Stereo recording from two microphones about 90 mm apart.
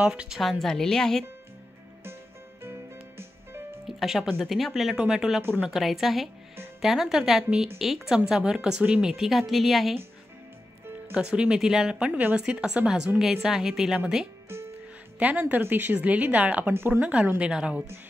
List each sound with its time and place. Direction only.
0.0 s speech: 10° right (ahead or behind)
0.4 s speech: centre (ahead or behind)
2.6 s music: 25° right (ahead or behind)
3.8 s speech: 5° right (ahead or behind)
11.1 s speech: 10° right (ahead or behind)
14.5 s music: 30° right (ahead or behind)
15.1 s speech: 15° right (ahead or behind)